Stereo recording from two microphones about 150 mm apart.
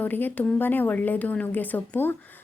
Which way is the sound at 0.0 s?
10° left (ahead or behind).